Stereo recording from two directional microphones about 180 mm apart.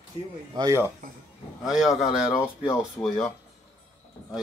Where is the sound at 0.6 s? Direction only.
15° right (ahead or behind).